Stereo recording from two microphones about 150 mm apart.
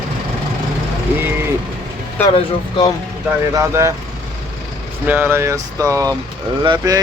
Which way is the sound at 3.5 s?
20° right (ahead or behind).